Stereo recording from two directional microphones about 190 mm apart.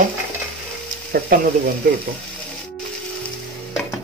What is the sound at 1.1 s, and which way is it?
Speech, 50° right (ahead or behind).